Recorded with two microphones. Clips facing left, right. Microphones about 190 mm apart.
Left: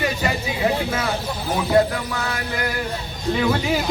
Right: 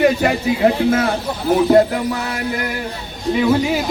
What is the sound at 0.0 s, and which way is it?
Speech, 55° right (ahead or behind).